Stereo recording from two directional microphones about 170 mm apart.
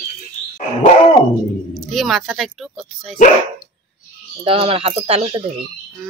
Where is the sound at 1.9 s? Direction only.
Centre (ahead or behind).